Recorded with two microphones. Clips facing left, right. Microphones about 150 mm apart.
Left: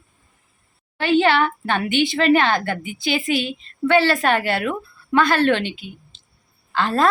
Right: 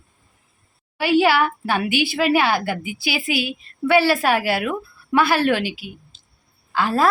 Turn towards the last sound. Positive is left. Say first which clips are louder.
# even
turn(degrees=-10)  # may be behind; listen again after turning